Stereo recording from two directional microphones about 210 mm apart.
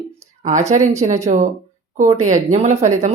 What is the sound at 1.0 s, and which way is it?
A woman's voice, 35° right (ahead or behind).